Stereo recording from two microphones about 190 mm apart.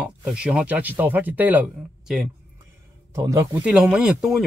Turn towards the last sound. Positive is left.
turn(degrees=-5)  # may be behind; listen again after turning